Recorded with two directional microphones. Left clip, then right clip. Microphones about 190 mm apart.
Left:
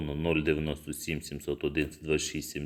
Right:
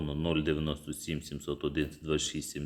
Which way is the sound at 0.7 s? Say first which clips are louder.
Left 2 dB; 45° right (ahead or behind).